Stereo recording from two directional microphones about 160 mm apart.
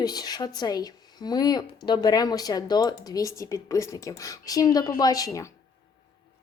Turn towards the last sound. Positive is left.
turn(degrees=20)  # may be behind; listen again after turning